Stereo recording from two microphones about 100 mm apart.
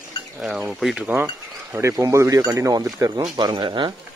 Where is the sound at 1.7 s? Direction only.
30° right (ahead or behind).